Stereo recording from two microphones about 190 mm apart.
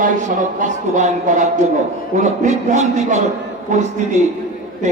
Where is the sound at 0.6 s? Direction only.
40° right (ahead or behind).